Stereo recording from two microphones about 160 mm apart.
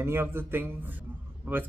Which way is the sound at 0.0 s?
15° right (ahead or behind).